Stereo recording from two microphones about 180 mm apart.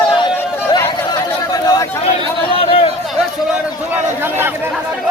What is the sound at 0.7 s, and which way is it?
Chatter, 20° left (ahead or behind).